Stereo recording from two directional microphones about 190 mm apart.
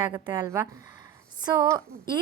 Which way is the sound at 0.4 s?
15° right (ahead or behind).